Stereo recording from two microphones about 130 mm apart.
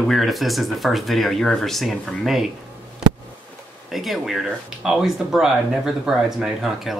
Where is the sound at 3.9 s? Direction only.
Centre (ahead or behind).